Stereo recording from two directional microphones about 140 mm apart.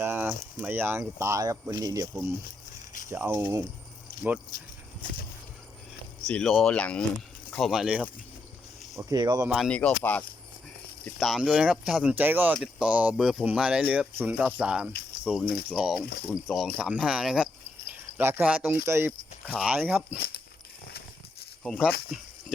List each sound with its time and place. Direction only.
0.0 s speech: 15° right (ahead or behind)
4.1 s a sound: 90° left
6.2 s speech: 5° left (ahead or behind)
9.0 s speech: 25° right (ahead or behind)
9.6 s speech: 10° left (ahead or behind)
11.2 s speech: centre (ahead or behind); by 19.1 s 20° right (ahead or behind)
19.5 s speech: 10° right (ahead or behind)
21.6 s speech: centre (ahead or behind)